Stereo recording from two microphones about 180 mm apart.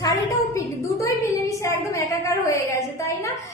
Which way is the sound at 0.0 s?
15° left (ahead or behind).